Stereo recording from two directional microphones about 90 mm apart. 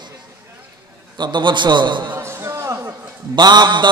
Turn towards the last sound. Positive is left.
turn(degrees=-55)  # may be behind; listen again after turning